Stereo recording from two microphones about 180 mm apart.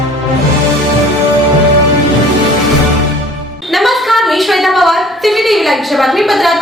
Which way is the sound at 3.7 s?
Centre (ahead or behind).